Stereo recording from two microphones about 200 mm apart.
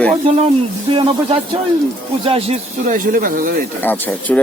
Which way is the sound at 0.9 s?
30° right (ahead or behind).